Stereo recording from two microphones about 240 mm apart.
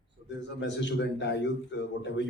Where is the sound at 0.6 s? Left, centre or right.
Left.